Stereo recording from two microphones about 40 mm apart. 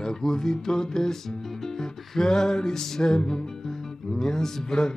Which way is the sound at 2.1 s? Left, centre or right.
Centre.